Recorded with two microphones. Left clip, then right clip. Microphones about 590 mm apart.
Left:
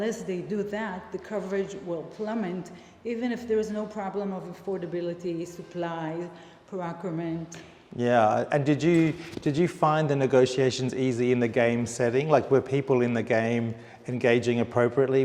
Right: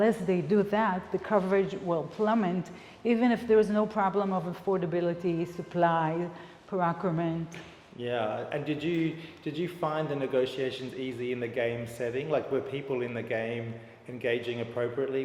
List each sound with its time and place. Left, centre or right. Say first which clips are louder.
0.0 s a woman's voice: right 4 dB; right
7.9 s a man's voice: left 9 dB; left